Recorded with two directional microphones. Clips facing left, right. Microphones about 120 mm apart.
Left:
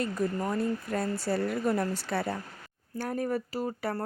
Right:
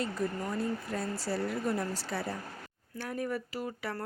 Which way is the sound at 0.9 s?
55° left (ahead or behind).